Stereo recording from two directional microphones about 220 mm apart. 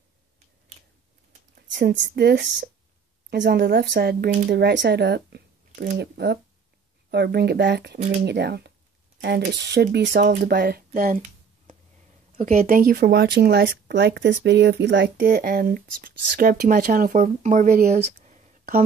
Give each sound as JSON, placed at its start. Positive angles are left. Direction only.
{"t": 1.5, "sound": "speech", "side_deg": -50}
{"t": 15.1, "sound": "speech", "side_deg": -40}